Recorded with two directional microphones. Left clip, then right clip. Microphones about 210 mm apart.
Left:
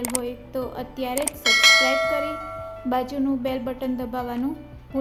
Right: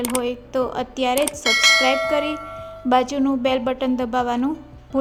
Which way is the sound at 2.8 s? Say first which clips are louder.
Right 6 dB; 25° right (ahead or behind).